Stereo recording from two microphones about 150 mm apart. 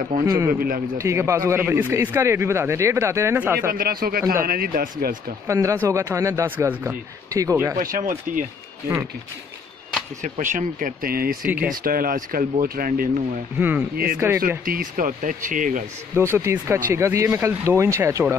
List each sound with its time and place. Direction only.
0.2 s speech: 20° right (ahead or behind)
0.6 s speech: 75° right (ahead or behind)
0.9 s speech: 20° right (ahead or behind)
3.7 s speech: 80° right
5.5 s speech: 20° right (ahead or behind)
7.8 s speech: 65° right (ahead or behind)
10.2 s speech: 55° right (ahead or behind); by 11.3 s 75° right (ahead or behind)
11.4 s speech: 10° right (ahead or behind)
11.7 s speech: 75° right (ahead or behind)
13.6 s speech: 10° right (ahead or behind)
14.6 s speech: 70° right (ahead or behind)
16.2 s speech: 15° right (ahead or behind)